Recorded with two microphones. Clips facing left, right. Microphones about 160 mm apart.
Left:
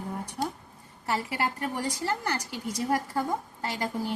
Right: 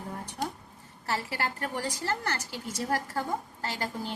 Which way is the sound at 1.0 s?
15° left (ahead or behind).